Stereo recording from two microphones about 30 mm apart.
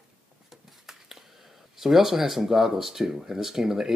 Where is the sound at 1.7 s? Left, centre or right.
Centre.